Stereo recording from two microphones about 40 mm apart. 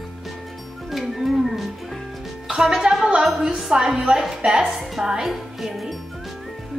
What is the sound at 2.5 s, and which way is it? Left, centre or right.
A woman's voice, centre.